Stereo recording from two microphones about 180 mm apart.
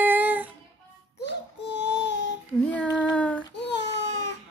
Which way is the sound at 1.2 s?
70° left (ahead or behind).